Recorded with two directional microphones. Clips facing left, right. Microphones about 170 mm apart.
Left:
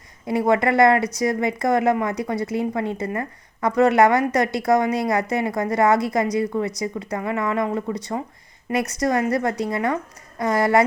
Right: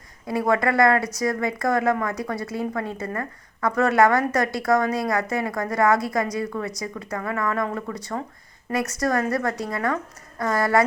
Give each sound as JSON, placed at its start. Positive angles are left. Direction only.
{"t": 0.3, "sound": "speech", "side_deg": 20}